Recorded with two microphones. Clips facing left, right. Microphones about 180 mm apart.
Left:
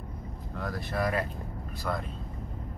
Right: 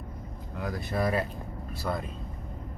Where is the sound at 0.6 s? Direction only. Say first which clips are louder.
Right 1 dB; 20° right (ahead or behind).